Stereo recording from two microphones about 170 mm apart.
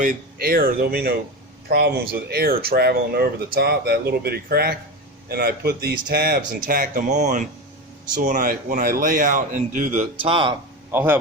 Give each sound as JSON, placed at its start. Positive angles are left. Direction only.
{"t": 0.0, "sound": "speech", "side_deg": -55}
{"t": 10.9, "sound": "a man's voice", "side_deg": -10}